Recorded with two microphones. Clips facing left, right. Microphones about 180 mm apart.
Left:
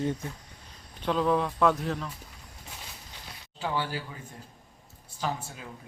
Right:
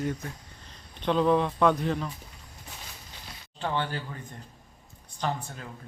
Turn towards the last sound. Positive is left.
turn(degrees=5)  # may be behind; listen again after turning